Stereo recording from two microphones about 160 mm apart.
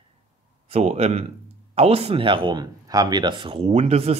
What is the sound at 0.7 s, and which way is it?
Speech, 40° right (ahead or behind).